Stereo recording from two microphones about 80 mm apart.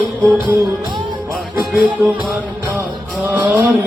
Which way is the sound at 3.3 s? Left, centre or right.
Centre.